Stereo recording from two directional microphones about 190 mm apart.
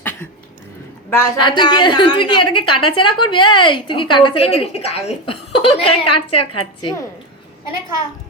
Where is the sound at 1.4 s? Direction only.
25° left (ahead or behind).